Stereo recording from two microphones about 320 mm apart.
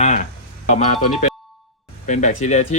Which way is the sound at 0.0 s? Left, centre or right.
Left.